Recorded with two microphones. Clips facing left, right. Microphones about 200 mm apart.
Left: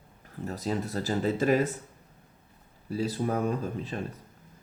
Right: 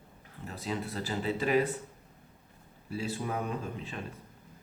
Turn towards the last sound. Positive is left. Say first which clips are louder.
# left 6 dB
turn(degrees=40)  # may be behind; listen again after turning